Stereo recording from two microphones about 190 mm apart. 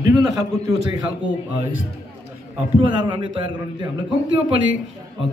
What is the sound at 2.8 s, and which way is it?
A man's voice, 25° right (ahead or behind).